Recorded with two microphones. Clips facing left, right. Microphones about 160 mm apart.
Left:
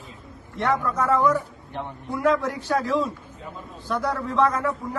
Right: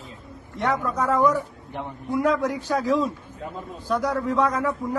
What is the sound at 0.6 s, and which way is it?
A man's voice, 15° right (ahead or behind).